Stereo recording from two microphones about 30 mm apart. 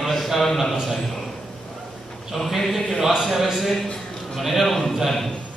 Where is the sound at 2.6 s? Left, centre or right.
Centre.